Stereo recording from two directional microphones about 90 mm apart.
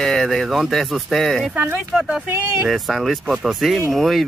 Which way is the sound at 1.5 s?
20° right (ahead or behind).